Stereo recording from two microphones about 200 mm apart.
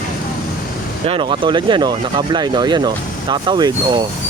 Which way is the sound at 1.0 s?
25° right (ahead or behind).